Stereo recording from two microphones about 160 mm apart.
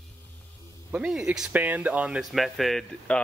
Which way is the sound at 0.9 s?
5° right (ahead or behind).